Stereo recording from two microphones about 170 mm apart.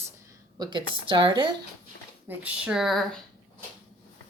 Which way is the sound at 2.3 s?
10° right (ahead or behind).